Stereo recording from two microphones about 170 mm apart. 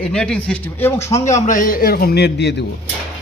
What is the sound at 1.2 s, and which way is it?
A man's voice, 45° left (ahead or behind).